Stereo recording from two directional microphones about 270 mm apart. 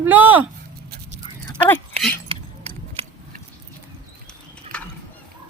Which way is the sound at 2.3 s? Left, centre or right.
Right.